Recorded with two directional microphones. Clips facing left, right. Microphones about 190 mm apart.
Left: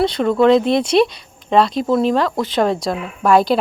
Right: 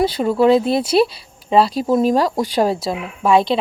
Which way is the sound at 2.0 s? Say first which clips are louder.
Right 2 dB; 40° right (ahead or behind).